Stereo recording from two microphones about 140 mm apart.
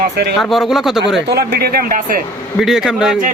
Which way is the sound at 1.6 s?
90° right.